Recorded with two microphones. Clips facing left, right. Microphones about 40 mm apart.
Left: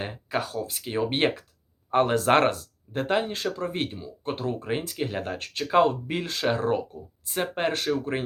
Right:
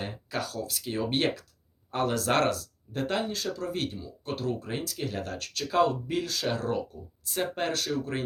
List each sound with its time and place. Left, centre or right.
0.0 s speech: left
3.2 s speech: left